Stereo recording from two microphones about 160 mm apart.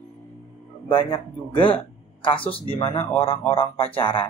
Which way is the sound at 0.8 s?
30° left (ahead or behind).